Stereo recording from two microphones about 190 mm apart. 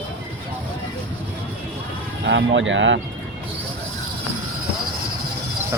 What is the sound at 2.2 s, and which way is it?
Speech, 70° right (ahead or behind).